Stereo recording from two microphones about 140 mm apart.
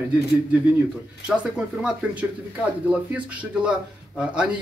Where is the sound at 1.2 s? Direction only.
5° right (ahead or behind).